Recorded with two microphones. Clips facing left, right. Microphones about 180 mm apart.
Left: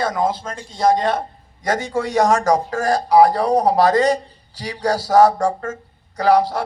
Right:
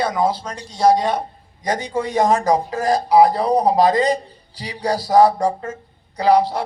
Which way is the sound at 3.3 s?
45° left (ahead or behind).